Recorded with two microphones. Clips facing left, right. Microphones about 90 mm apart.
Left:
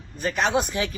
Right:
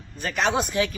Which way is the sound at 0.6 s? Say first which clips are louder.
Right 3 dB; 25° left (ahead or behind).